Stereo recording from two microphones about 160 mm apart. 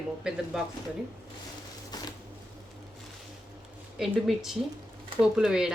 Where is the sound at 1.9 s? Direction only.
25° left (ahead or behind).